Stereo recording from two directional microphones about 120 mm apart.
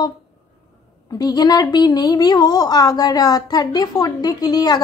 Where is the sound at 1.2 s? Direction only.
35° left (ahead or behind).